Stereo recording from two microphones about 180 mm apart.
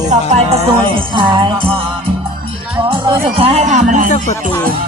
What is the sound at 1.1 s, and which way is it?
Music, 25° right (ahead or behind).